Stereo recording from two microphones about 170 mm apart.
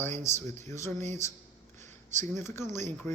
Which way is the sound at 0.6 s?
15° left (ahead or behind).